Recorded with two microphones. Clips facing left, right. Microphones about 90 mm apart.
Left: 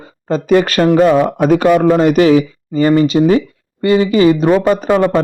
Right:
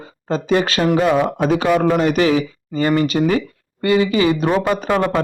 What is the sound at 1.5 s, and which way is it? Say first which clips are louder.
Speech: left 8 dB; 50° left (ahead or behind).